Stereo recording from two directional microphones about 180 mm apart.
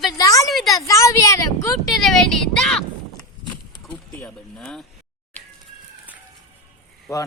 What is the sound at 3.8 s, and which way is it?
Speech, 5° left (ahead or behind).